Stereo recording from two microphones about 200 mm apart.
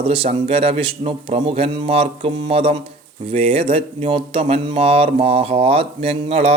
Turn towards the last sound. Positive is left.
turn(degrees=-30)  # may be behind; listen again after turning